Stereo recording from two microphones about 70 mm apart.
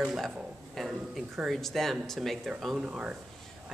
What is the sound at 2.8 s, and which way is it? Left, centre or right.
Speech, centre.